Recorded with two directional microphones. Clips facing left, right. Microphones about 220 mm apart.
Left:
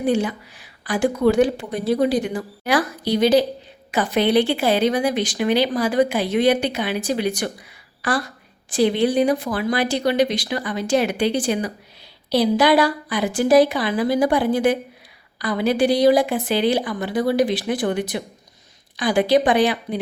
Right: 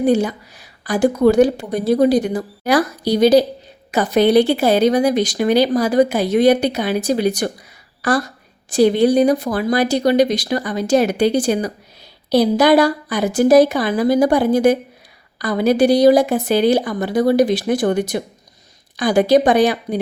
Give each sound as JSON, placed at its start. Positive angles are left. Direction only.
{"t": 0.0, "sound": "a woman's voice", "side_deg": -40}